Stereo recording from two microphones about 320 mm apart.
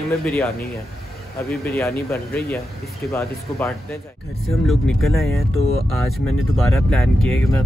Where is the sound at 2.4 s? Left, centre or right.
Centre.